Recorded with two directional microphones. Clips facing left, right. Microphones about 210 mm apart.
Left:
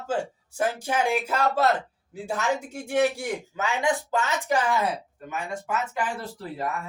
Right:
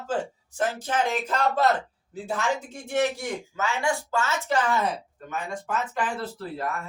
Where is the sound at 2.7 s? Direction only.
10° left (ahead or behind).